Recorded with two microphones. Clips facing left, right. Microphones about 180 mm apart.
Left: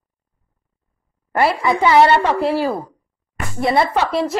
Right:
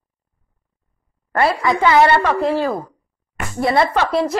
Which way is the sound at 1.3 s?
10° left (ahead or behind).